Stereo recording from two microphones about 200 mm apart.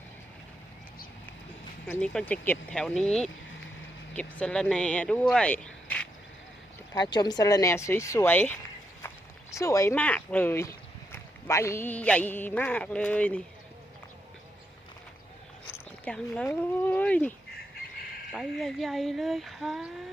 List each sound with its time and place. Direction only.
1.9 s speech: 5° left (ahead or behind)
6.9 s speech: 20° left (ahead or behind)
16.0 s speech: 5° left (ahead or behind)